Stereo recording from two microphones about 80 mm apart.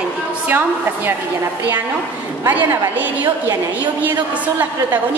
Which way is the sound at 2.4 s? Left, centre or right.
Right.